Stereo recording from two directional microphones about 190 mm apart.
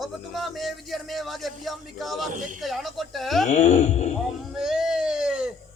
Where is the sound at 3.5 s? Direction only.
35° left (ahead or behind).